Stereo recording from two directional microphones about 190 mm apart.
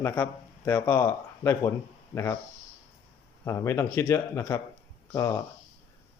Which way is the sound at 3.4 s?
15° left (ahead or behind).